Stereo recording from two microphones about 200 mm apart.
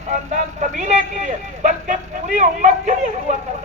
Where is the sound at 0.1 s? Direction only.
35° right (ahead or behind).